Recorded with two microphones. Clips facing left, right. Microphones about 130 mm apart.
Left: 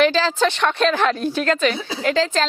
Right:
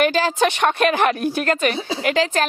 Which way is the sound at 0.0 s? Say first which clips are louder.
Left 1 dB; 50° right (ahead or behind).